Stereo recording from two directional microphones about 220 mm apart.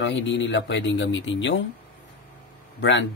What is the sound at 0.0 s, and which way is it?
Speech, 55° left (ahead or behind).